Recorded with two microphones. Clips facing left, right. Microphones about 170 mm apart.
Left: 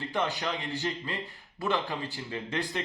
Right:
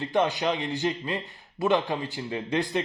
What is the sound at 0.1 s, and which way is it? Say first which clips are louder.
Speech: right 7 dB; 20° right (ahead or behind).